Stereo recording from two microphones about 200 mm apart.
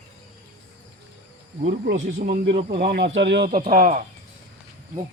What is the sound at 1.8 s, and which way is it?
Speech, 55° right (ahead or behind).